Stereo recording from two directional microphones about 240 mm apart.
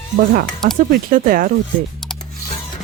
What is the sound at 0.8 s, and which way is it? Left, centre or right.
Speech, right.